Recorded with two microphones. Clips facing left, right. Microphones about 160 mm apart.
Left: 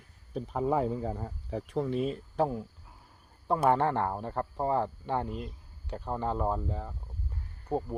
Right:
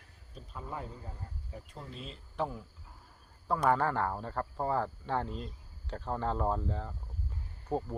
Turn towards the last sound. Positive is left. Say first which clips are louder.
# left 2 dB
turn(degrees=15)  # may be behind; listen again after turning